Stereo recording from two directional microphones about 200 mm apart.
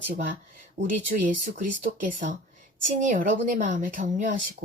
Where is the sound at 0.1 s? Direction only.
40° right (ahead or behind).